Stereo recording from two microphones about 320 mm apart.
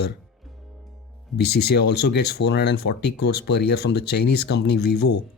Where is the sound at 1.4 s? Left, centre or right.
Left.